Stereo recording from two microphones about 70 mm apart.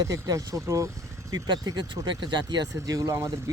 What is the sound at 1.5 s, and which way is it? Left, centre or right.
Speech, right.